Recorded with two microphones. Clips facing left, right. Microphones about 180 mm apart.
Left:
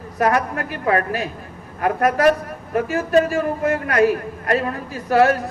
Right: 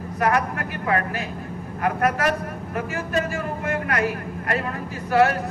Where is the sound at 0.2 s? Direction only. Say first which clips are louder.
Left 3 dB; 40° left (ahead or behind).